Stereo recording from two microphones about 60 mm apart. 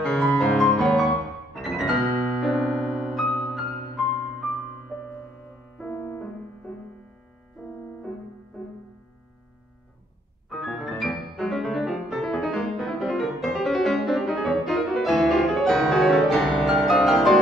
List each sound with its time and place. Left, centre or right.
0.0 s music: centre
1.6 s piano: centre
2.4 s music: centre
5.9 s music: left
8.6 s music: centre
10.8 s music: centre